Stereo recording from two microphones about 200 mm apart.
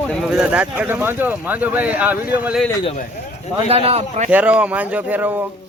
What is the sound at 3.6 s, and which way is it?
Speech, 30° right (ahead or behind).